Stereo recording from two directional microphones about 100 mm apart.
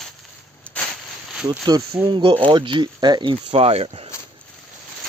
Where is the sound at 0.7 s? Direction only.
10° left (ahead or behind).